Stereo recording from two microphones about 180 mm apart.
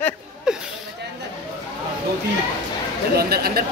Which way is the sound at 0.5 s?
5° right (ahead or behind).